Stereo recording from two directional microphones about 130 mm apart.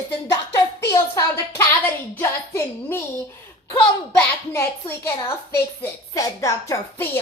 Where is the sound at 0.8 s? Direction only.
20° left (ahead or behind).